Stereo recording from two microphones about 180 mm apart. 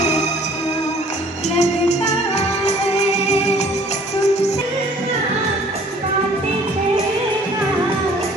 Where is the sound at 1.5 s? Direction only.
40° left (ahead or behind).